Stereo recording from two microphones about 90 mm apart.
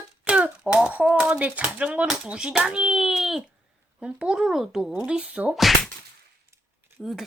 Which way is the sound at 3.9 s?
10° right (ahead or behind).